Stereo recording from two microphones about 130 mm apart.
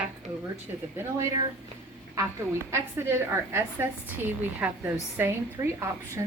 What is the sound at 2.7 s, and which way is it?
A woman's voice, 20° right (ahead or behind).